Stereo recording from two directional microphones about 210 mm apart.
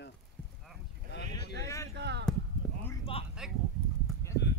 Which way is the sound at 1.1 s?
55° left (ahead or behind).